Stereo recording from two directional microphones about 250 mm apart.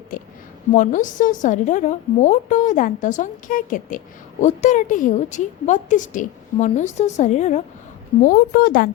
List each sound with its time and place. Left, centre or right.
0.1 s a woman's voice: left